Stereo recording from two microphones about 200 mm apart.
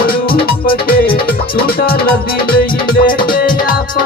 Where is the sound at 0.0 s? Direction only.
50° left (ahead or behind).